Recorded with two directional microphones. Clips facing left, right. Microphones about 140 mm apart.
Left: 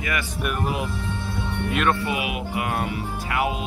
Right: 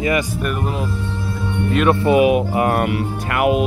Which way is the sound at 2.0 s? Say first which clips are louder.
Right 13 dB; 40° right (ahead or behind).